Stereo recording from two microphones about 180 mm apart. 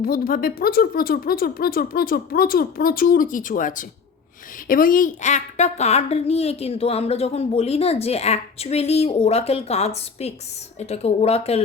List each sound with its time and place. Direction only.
0.0 s a woman's voice: 55° left (ahead or behind); by 11.6 s 35° left (ahead or behind)